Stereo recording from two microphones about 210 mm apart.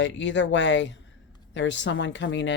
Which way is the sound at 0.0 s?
60° left (ahead or behind).